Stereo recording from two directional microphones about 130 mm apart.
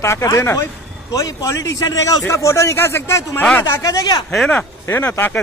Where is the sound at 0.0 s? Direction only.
25° left (ahead or behind).